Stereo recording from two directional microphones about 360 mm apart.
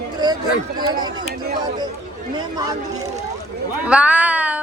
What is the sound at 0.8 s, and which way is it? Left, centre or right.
Speech, centre.